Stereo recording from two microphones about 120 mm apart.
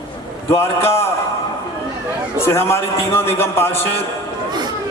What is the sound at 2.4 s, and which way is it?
A man's voice, 20° left (ahead or behind).